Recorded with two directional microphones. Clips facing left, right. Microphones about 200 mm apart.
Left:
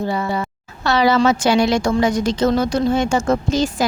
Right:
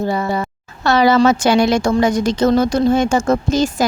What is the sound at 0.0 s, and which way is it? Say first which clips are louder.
Speech: right 2 dB; 45° right (ahead or behind).